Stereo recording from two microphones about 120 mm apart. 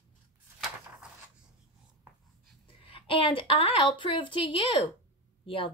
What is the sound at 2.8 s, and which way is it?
A woman's voice, 45° left (ahead or behind).